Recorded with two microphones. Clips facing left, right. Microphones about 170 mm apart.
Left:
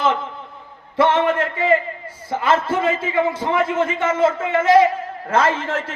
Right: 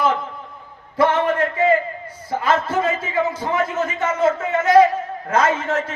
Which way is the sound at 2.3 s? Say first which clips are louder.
Left 1 dB; 25° left (ahead or behind).